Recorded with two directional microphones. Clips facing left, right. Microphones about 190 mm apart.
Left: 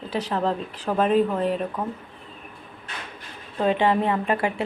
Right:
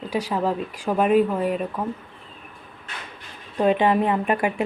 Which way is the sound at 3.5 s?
15° right (ahead or behind).